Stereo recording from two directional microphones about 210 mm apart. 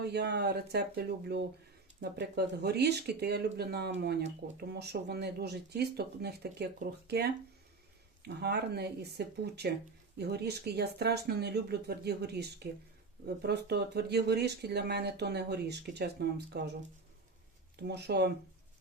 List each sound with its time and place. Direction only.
0.0 s speech: 50° right (ahead or behind)
17.7 s speech: 50° right (ahead or behind)